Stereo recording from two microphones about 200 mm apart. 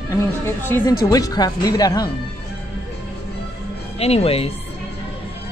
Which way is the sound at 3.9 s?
30° left (ahead or behind).